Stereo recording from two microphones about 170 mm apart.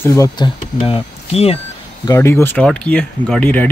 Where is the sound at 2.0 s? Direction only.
20° left (ahead or behind).